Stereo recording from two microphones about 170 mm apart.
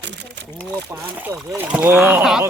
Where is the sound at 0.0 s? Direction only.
90° right.